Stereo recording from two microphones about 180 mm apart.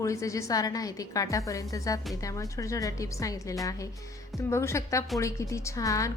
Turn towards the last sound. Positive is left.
turn(degrees=20)  # may be behind; listen again after turning